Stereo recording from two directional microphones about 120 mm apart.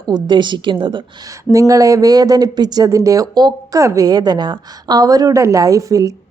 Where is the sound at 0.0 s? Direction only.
35° right (ahead or behind).